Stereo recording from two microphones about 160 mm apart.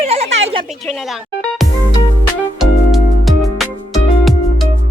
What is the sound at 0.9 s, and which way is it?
Music, centre (ahead or behind).